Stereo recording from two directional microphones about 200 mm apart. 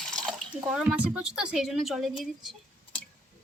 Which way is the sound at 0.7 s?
5° right (ahead or behind).